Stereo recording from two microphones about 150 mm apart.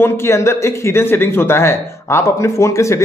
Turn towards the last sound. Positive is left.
turn(degrees=20)  # may be behind; listen again after turning